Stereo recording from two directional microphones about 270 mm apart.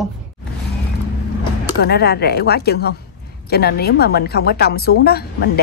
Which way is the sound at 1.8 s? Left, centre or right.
Left.